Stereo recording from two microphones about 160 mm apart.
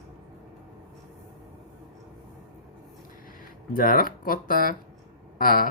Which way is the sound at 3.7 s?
60° left (ahead or behind).